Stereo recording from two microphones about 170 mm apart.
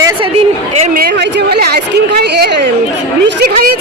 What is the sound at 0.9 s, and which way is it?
Speech, 70° right (ahead or behind).